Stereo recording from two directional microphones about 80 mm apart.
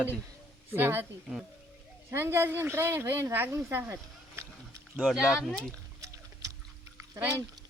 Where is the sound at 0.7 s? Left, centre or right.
Right.